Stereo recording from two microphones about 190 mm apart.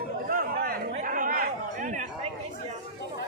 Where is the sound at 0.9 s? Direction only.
45° right (ahead or behind).